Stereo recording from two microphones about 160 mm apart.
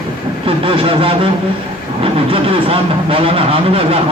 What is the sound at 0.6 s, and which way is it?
Speech, 35° right (ahead or behind).